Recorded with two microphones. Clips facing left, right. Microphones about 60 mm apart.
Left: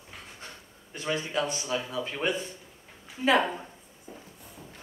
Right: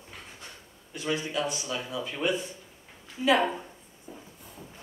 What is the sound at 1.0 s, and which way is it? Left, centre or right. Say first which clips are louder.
A man's voice: even; left.